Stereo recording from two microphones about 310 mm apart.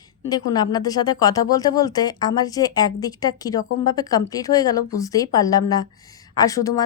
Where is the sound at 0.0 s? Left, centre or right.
Centre.